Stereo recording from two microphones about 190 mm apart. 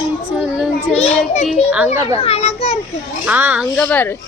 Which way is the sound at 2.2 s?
35° left (ahead or behind).